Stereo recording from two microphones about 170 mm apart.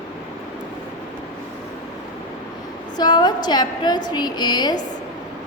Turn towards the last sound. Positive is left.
turn(degrees=25)  # may be behind; listen again after turning